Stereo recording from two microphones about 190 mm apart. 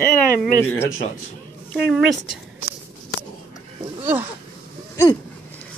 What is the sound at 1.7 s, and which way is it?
Speech, centre (ahead or behind).